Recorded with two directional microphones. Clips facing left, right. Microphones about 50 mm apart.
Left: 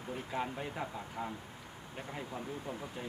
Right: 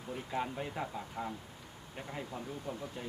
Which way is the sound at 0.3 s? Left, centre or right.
Centre.